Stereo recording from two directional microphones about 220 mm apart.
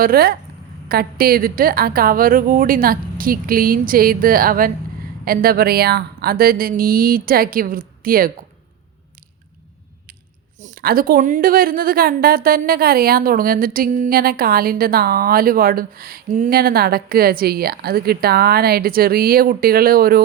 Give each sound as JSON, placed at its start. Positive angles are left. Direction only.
{"t": 0.0, "sound": "a woman's voice", "side_deg": -45}
{"t": 10.6, "sound": "a woman's voice", "side_deg": -40}